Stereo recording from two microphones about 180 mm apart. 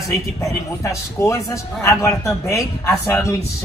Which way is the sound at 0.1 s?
15° left (ahead or behind).